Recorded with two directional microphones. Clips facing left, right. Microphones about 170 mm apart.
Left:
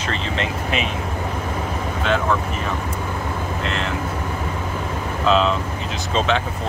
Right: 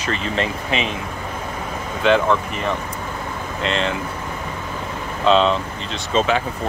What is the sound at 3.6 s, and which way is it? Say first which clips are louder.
Speech: right 7 dB; 90° right.